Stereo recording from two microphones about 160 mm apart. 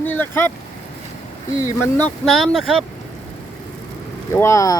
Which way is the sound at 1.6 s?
10° left (ahead or behind).